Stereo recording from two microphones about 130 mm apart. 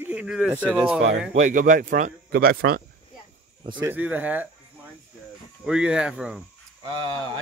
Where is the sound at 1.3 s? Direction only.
75° right (ahead or behind).